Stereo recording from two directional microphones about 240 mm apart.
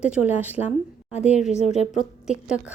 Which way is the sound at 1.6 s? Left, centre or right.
Left.